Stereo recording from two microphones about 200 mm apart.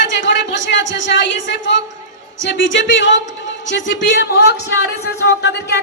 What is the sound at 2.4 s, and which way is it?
Speech, 65° left (ahead or behind).